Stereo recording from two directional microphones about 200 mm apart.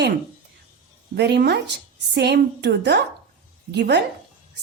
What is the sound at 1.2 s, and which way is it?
A woman's voice, 55° right (ahead or behind).